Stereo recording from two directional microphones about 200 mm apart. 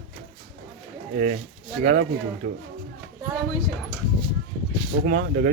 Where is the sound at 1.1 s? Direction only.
40° right (ahead or behind).